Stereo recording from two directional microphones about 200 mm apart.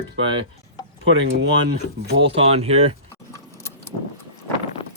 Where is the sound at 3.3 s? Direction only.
15° left (ahead or behind).